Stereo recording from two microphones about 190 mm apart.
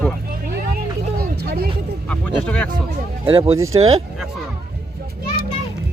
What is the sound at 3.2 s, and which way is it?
Speech, 25° right (ahead or behind).